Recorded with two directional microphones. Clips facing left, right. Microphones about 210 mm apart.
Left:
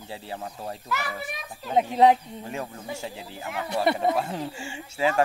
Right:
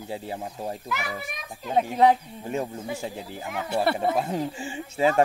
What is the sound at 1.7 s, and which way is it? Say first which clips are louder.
Speech: left 1 dB; 20° left (ahead or behind).